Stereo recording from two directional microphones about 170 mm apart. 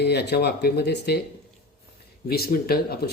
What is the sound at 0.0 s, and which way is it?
Speech, 75° left (ahead or behind).